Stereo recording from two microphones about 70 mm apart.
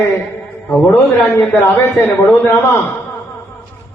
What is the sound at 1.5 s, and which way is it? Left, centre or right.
Speech, left.